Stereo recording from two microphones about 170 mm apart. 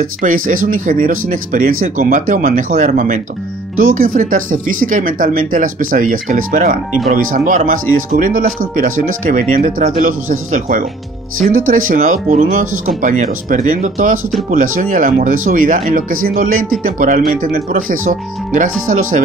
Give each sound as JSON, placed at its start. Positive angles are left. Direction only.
{"t": 0.2, "sound": "speech", "side_deg": -50}